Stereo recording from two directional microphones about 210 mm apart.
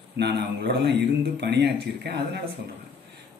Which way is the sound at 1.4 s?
50° right (ahead or behind).